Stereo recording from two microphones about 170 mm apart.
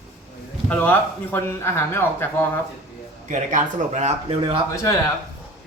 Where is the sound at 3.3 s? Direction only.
45° right (ahead or behind).